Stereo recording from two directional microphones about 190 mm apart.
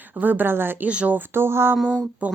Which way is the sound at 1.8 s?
5° left (ahead or behind).